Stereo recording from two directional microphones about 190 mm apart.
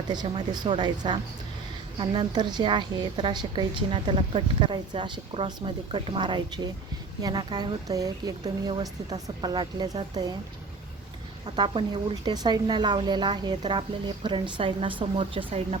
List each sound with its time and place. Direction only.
0.1 s a woman's voice: 20° right (ahead or behind)
11.4 s a woman's voice: 20° right (ahead or behind)